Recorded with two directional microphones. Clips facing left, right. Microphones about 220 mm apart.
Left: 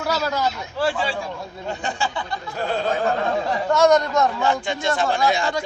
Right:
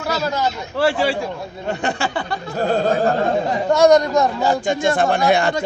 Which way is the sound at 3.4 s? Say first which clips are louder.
Right 3 dB; 20° right (ahead or behind).